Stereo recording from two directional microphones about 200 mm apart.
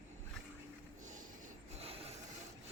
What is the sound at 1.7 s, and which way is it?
Filing, 30° right (ahead or behind).